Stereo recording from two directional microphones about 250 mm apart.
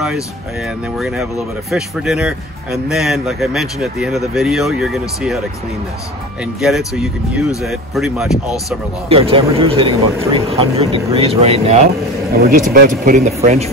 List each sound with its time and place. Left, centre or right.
0.9 s speech: centre
6.4 s speech: centre
9.1 s speech: right
12.4 s speech: right